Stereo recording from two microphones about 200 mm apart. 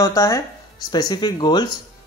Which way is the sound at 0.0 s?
15° left (ahead or behind).